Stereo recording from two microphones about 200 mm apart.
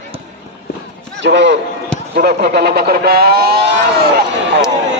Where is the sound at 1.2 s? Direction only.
60° right (ahead or behind).